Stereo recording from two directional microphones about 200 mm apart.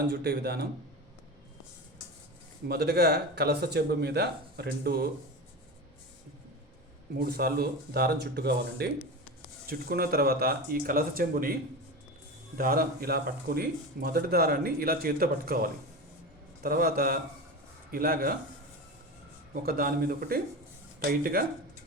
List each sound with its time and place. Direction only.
0.1 s speech: 55° right (ahead or behind)
2.6 s speech: 55° right (ahead or behind)
7.2 s speech: 50° right (ahead or behind)
12.5 s speech: 50° right (ahead or behind)
19.6 s speech: 50° right (ahead or behind)